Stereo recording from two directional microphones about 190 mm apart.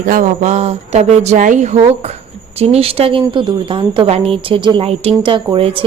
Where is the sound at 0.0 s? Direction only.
40° right (ahead or behind).